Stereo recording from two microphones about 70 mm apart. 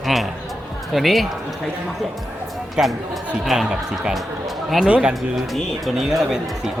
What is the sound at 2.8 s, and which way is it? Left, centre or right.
Speech, centre.